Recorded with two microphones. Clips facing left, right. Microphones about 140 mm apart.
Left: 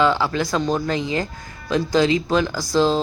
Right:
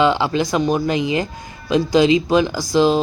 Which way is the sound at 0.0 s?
20° right (ahead or behind).